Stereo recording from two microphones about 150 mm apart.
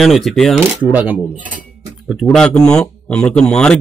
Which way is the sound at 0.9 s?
10° right (ahead or behind).